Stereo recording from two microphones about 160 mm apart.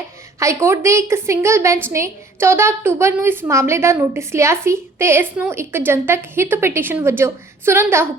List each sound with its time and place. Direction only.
0.3 s a woman's voice: 15° right (ahead or behind)